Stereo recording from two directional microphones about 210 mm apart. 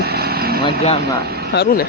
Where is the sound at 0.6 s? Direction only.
30° left (ahead or behind).